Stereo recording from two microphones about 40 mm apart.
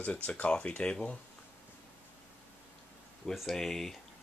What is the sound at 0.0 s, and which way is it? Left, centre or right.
Speech, left.